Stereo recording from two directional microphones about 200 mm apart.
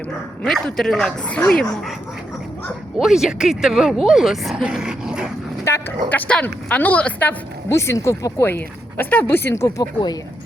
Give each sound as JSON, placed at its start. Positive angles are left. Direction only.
{"t": 0.4, "sound": "speech", "side_deg": 0}
{"t": 2.6, "sound": "speech", "side_deg": 0}
{"t": 5.6, "sound": "a woman's voice", "side_deg": 10}